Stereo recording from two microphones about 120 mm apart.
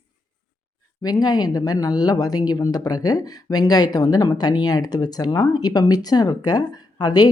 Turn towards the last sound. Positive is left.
turn(degrees=35)  # may be behind; listen again after turning